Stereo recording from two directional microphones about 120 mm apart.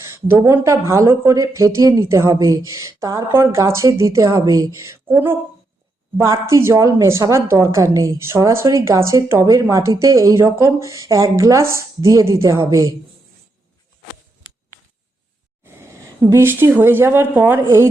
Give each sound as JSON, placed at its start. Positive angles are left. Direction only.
{"t": 0.0, "sound": "a woman's voice", "side_deg": -20}
{"t": 15.6, "sound": "speech", "side_deg": -20}